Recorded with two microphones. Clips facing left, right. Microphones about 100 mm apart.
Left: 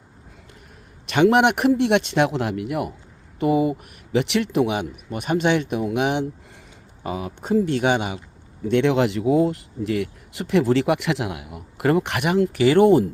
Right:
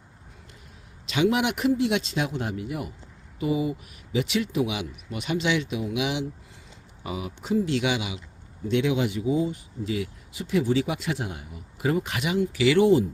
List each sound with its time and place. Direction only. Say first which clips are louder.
1.0 s speech: left 7 dB; 60° left (ahead or behind)
3.4 s speech: left 6 dB; 55° left (ahead or behind)
8.6 s speech: left 5 dB; 60° left (ahead or behind)